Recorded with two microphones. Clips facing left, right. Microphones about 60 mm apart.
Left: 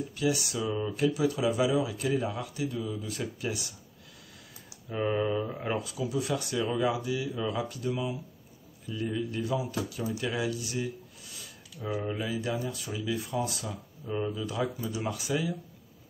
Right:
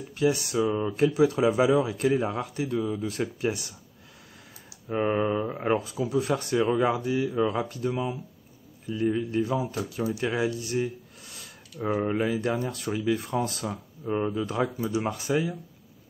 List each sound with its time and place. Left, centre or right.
0.1 s speech: right
4.9 s speech: right
13.7 s speech: right